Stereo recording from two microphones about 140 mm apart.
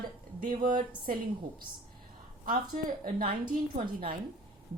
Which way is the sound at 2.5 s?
90° right.